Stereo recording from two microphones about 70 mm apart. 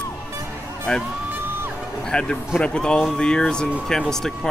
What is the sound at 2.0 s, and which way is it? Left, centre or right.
Speech, centre.